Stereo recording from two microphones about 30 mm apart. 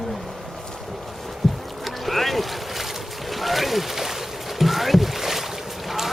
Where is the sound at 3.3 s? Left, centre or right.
Centre.